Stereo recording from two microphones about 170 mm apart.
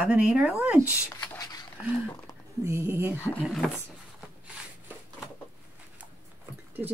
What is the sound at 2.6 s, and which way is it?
Speech, 15° right (ahead or behind).